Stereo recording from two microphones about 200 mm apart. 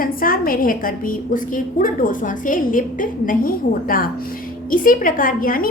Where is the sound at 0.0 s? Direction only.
45° left (ahead or behind).